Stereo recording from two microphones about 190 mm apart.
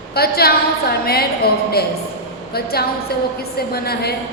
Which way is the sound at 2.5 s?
55° left (ahead or behind).